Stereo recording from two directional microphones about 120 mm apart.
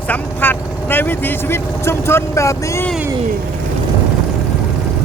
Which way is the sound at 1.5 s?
20° left (ahead or behind).